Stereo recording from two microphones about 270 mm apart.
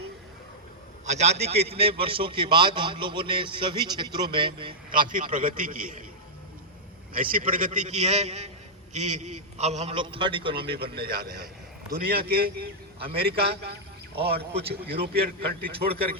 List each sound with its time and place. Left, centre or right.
1.0 s a man's voice: right
4.9 s a man's voice: right
7.1 s a man's voice: right
10.9 s a man's voice: right